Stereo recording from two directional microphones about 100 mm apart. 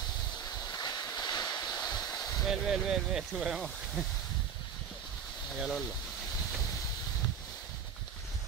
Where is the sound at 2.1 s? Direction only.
40° left (ahead or behind).